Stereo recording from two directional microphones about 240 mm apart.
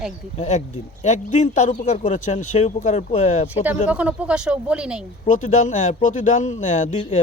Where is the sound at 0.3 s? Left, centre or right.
Left.